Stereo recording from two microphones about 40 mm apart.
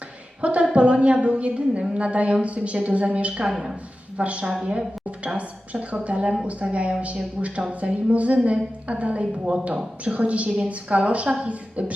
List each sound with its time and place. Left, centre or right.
0.4 s a woman's voice: right